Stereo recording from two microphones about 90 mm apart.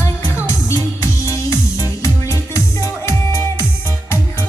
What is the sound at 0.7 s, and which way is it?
Music, 35° left (ahead or behind).